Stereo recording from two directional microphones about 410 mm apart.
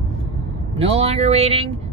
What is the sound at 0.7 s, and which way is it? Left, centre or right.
Speech, centre.